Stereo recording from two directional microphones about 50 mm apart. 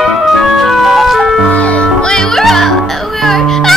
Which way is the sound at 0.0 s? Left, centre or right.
Centre.